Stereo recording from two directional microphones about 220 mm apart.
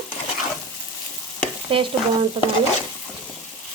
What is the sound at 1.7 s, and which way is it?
Speech, 25° right (ahead or behind).